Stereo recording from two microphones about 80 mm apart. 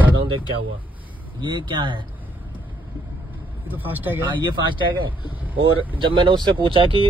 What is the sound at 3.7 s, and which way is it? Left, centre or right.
Speech, right.